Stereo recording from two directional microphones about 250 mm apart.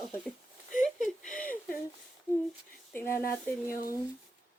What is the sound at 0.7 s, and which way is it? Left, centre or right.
Whimper, left.